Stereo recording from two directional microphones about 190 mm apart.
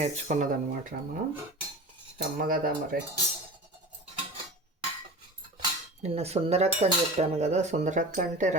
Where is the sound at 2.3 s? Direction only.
50° right (ahead or behind).